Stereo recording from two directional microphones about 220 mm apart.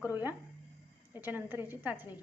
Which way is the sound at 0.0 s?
10° right (ahead or behind).